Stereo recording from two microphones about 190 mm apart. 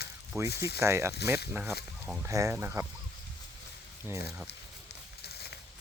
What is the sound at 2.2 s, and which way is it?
Speech, 15° right (ahead or behind).